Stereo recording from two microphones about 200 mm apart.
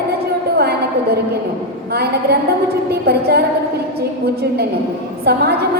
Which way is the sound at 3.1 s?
50° right (ahead or behind).